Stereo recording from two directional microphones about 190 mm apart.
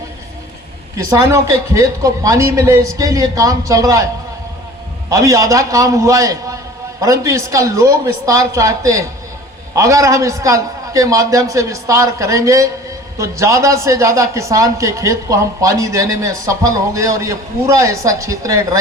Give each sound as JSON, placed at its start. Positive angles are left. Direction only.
{"t": 0.9, "sound": "a man's voice", "side_deg": -15}